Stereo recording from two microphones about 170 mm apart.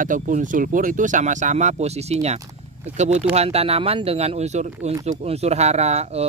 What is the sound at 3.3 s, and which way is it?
Speech, 35° right (ahead or behind).